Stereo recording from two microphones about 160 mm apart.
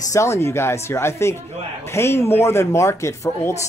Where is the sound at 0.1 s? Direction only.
20° left (ahead or behind).